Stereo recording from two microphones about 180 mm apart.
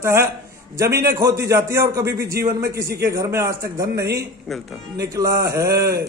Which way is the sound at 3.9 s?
65° right (ahead or behind).